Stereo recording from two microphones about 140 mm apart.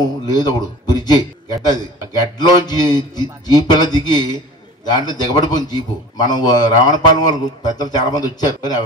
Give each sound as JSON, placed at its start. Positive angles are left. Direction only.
{"t": 0.0, "sound": "a man's voice", "side_deg": 30}